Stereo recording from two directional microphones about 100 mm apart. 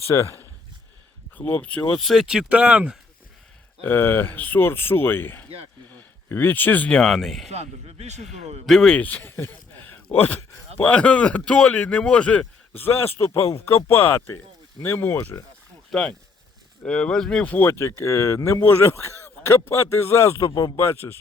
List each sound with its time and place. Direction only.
0.0 s speech: 30° left (ahead or behind)
1.4 s speech: 15° left (ahead or behind); by 3.0 s 10° right (ahead or behind)
3.8 s speech: 20° left (ahead or behind); by 7.5 s centre (ahead or behind)
7.5 s speech: 90° right
8.6 s speech: centre (ahead or behind)
9.0 s speech: 15° left (ahead or behind)
15.9 s speech: 5° left (ahead or behind); by 20.5 s 25° left (ahead or behind)
20.5 s speech: 40° left (ahead or behind)
20.7 s speech: 25° left (ahead or behind)